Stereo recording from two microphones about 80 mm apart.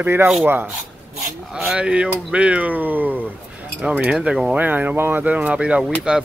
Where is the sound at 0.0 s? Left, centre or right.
Right.